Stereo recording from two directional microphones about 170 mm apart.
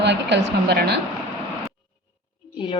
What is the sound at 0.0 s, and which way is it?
Speech, 90° right.